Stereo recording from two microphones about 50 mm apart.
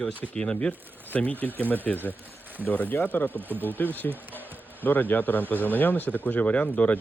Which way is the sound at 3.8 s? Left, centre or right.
Left.